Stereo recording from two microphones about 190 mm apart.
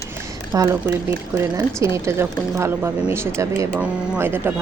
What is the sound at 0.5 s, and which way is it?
A woman's voice, 15° right (ahead or behind).